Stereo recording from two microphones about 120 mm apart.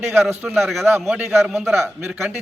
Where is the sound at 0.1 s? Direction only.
20° right (ahead or behind).